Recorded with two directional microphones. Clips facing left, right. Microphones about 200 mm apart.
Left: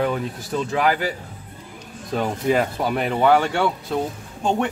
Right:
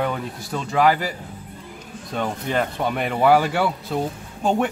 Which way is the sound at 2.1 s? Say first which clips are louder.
Left 4 dB; 5° left (ahead or behind).